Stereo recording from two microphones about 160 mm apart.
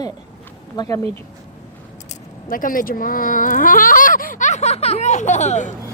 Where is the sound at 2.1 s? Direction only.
60° left (ahead or behind).